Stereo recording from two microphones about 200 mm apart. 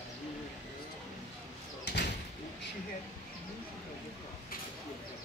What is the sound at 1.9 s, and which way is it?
Door, 55° left (ahead or behind).